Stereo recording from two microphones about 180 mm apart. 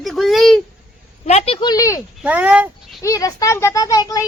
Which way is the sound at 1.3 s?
35° left (ahead or behind).